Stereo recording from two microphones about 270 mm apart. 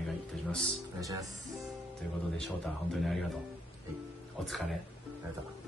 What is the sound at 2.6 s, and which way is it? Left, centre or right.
Speech, centre.